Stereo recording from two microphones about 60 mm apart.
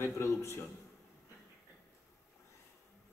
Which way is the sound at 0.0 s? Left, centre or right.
Left.